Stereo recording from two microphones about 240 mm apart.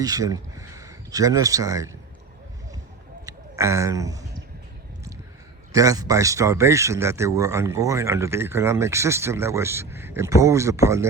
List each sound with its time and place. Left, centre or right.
0.0 s speech: centre
3.2 s speech: centre
5.7 s speech: centre